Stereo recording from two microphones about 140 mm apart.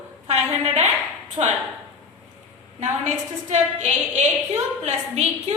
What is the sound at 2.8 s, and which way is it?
A woman's voice, 60° right (ahead or behind).